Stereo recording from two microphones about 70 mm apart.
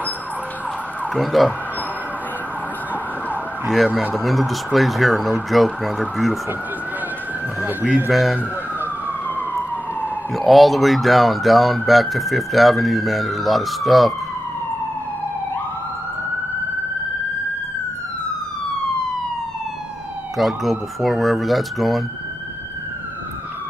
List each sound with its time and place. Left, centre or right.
1.1 s speech: centre
3.7 s speech: centre
7.6 s speech: right
8.1 s speech: centre
9.3 s emergency vehicle: left
10.3 s speech: centre
20.3 s speech: centre